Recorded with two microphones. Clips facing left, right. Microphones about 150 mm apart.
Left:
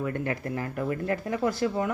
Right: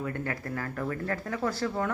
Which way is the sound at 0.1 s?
20° left (ahead or behind).